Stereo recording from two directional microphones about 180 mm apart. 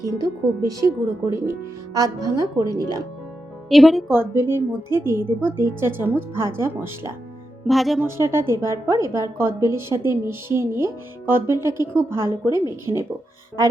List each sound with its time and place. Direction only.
0.2 s speech: 20° right (ahead or behind)
3.7 s a woman's voice: centre (ahead or behind)
4.1 s a woman's voice: 15° right (ahead or behind)
7.7 s a woman's voice: centre (ahead or behind)
8.0 s a woman's voice: 15° right (ahead or behind)